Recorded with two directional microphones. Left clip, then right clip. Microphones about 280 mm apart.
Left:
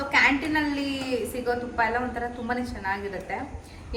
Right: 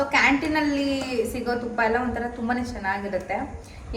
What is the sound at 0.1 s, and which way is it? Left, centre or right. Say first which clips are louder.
A woman's voice: left 3 dB; centre.